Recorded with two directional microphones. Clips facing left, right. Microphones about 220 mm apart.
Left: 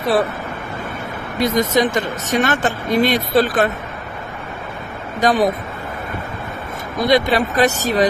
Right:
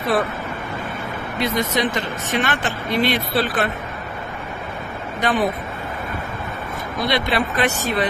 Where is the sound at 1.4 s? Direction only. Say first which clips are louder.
Left 5 dB; 45° left (ahead or behind).